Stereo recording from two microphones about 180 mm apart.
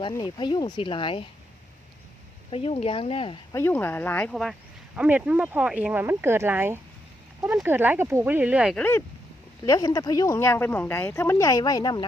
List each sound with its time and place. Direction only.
0.1 s speech: 25° left (ahead or behind)
2.5 s speech: 30° left (ahead or behind)
3.5 s speech: 10° left (ahead or behind); by 8.7 s 5° right (ahead or behind)
8.7 s speech: 10° left (ahead or behind)
9.6 s speech: 20° left (ahead or behind)